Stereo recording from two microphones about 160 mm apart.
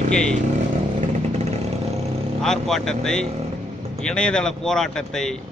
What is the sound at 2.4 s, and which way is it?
Speech, 5° left (ahead or behind).